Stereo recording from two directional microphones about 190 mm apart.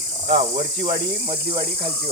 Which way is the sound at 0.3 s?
60° right (ahead or behind).